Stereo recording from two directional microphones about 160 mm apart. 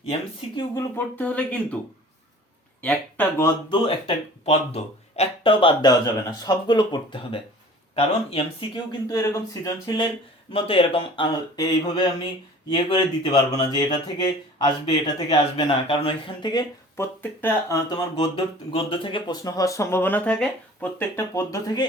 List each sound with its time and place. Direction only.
0.9 s speech: 10° left (ahead or behind)
2.8 s speech: 10° left (ahead or behind)
3.7 s speech: 35° left (ahead or behind)
10.5 s speech: 35° left (ahead or behind)